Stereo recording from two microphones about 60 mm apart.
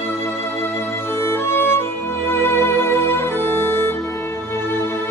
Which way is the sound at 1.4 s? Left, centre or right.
Left.